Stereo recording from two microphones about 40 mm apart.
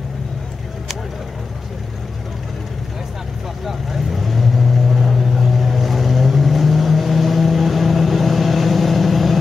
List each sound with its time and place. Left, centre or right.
3.6 s vehicle: centre